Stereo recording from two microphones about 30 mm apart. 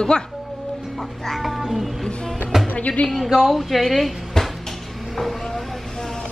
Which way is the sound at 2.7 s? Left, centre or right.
Left.